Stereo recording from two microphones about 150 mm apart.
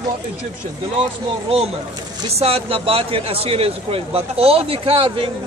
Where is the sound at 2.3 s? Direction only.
40° right (ahead or behind).